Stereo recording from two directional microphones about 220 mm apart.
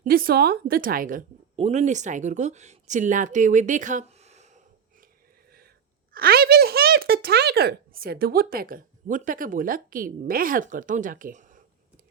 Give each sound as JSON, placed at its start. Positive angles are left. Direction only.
{"t": 0.0, "sound": "a woman's voice", "side_deg": -40}
{"t": 6.1, "sound": "speech", "side_deg": -45}